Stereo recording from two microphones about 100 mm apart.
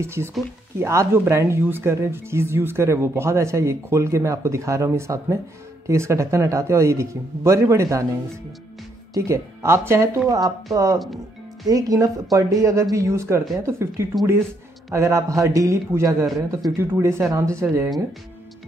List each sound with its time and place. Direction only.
0.0 s speech: 25° right (ahead or behind)
9.1 s speech: 30° right (ahead or behind)